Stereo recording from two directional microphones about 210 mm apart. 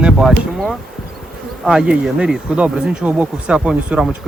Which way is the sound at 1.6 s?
5° right (ahead or behind).